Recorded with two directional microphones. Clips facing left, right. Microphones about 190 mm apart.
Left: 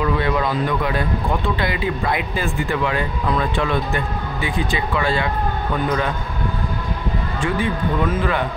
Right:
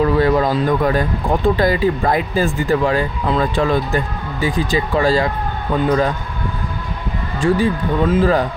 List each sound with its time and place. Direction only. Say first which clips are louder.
0.0 s speech: right 6 dB; 40° right (ahead or behind)
7.4 s speech: right 6 dB; 35° right (ahead or behind)